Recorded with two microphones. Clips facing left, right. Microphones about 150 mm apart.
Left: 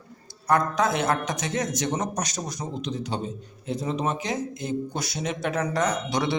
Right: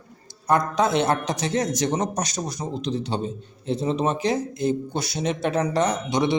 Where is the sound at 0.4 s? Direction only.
25° right (ahead or behind).